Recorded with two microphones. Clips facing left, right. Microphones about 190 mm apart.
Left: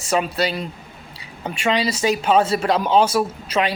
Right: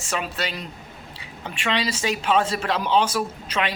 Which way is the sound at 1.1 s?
40° left (ahead or behind).